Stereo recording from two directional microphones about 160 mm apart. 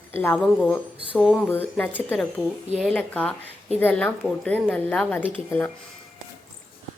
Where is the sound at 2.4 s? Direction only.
5° right (ahead or behind).